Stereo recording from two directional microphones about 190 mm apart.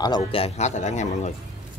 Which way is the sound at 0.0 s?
25° left (ahead or behind).